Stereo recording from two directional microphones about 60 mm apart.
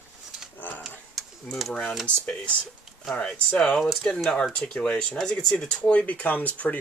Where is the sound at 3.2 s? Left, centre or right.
Centre.